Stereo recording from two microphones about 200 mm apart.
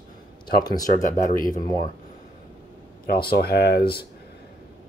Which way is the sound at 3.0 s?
50° left (ahead or behind).